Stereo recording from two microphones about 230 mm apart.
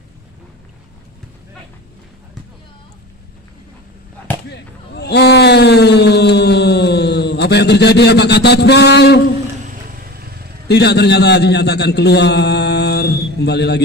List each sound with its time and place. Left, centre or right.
4.5 s speech: left
9.6 s vehicle: right
10.7 s a man's voice: left